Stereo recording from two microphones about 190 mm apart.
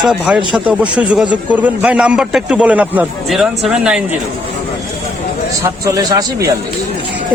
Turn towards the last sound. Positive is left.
turn(degrees=-20)  # may be behind; listen again after turning